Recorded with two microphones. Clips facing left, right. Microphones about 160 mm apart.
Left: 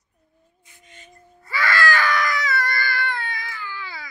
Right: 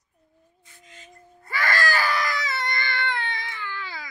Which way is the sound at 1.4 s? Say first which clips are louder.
Left 3 dB; 50° right (ahead or behind).